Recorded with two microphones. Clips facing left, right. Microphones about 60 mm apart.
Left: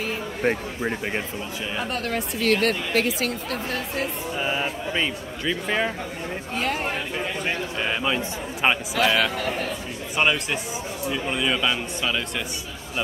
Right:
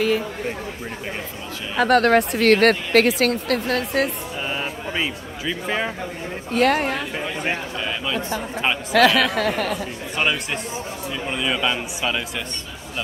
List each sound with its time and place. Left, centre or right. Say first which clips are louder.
1.8 s speech: right 13 dB; right
4.4 s a man's voice: left 2 dB; centre
6.5 s a man's voice: right 8 dB; right
7.8 s a man's voice: left 4 dB; left
8.9 s speech: right 5 dB; right
10.1 s a man's voice: left 1 dB; centre